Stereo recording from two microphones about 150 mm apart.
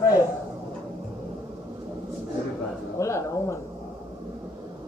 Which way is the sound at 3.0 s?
20° left (ahead or behind).